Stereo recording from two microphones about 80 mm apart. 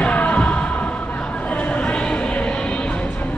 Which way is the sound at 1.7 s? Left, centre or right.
Centre.